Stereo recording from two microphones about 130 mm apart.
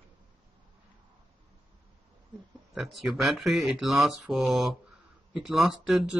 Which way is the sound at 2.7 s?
Centre (ahead or behind).